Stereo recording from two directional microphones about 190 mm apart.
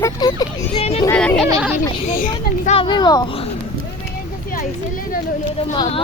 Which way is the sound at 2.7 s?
25° left (ahead or behind).